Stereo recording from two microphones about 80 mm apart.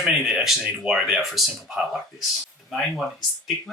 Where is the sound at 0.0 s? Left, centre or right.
Centre.